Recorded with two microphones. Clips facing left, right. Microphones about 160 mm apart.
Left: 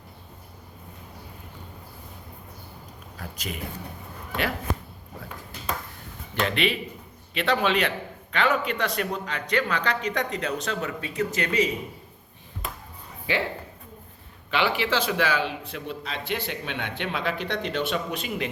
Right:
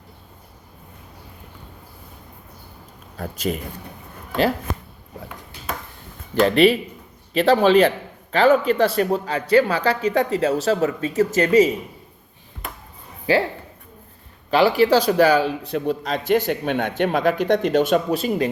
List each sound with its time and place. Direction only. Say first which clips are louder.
3.2 s a man's voice: right 11 dB; 45° right (ahead or behind)
6.4 s a man's voice: right 10 dB; 35° right (ahead or behind)
13.3 s speech: right 9 dB; 40° right (ahead or behind)
14.5 s a man's voice: right 9 dB; 40° right (ahead or behind)